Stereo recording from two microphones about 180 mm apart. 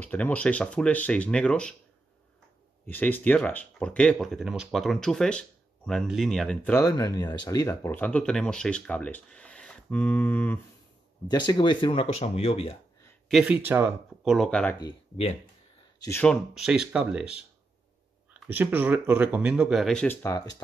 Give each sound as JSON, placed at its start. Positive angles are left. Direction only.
{"t": 0.0, "sound": "speech", "side_deg": 10}
{"t": 2.9, "sound": "speech", "side_deg": 10}
{"t": 11.2, "sound": "speech", "side_deg": 25}
{"t": 13.3, "sound": "speech", "side_deg": -5}
{"t": 14.8, "sound": "speech", "side_deg": 30}
{"t": 16.0, "sound": "speech", "side_deg": 15}
{"t": 16.3, "sound": "speech", "side_deg": -5}
{"t": 18.5, "sound": "speech", "side_deg": -10}